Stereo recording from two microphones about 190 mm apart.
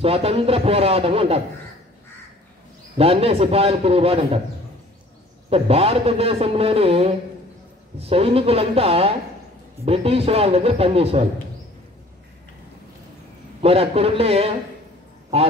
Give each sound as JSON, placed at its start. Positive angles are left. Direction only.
{"t": 0.0, "sound": "a man's voice", "side_deg": -30}
{"t": 3.0, "sound": "a man's voice", "side_deg": -30}
{"t": 5.5, "sound": "a man's voice", "side_deg": -30}
{"t": 13.6, "sound": "a man's voice", "side_deg": -30}